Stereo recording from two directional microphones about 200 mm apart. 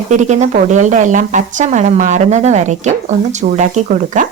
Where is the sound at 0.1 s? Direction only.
35° right (ahead or behind).